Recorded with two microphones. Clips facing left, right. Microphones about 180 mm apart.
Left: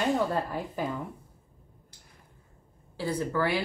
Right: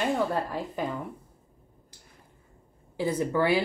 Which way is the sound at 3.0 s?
20° right (ahead or behind).